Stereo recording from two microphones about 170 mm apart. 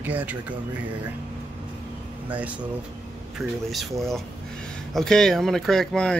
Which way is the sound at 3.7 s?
Centre (ahead or behind).